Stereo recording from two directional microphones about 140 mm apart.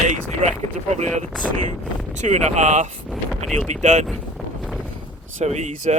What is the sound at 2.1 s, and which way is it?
Speech, 55° right (ahead or behind).